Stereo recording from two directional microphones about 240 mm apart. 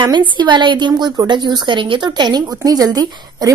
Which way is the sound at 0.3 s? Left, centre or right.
Centre.